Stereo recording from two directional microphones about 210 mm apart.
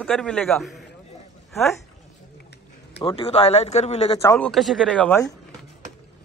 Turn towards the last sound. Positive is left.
turn(degrees=5)  # may be behind; listen again after turning